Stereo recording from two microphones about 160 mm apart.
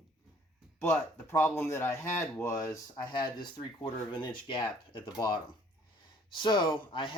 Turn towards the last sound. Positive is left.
turn(degrees=30)  # may be behind; listen again after turning